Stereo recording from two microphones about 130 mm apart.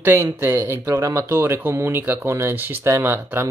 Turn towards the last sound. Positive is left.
turn(degrees=-15)  # may be behind; listen again after turning